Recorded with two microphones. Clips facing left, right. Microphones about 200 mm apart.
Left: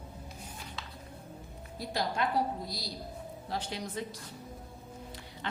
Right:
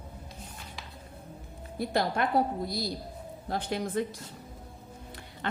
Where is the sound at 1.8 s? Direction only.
55° right (ahead or behind).